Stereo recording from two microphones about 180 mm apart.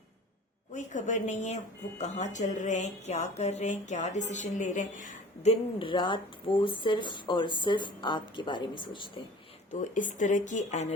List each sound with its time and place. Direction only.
0.7 s speech: 45° left (ahead or behind); by 9.2 s 25° left (ahead or behind)
9.8 s speech: 45° left (ahead or behind)